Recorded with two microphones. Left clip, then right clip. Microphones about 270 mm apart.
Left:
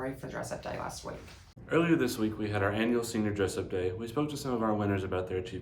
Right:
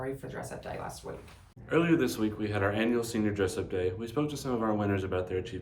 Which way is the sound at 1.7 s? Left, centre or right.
Centre.